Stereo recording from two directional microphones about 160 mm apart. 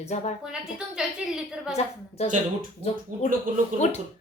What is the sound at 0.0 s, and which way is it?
Speech, 45° left (ahead or behind).